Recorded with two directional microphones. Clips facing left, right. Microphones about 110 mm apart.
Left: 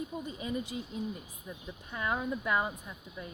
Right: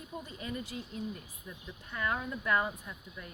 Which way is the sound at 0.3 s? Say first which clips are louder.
Left 4 dB; 15° left (ahead or behind).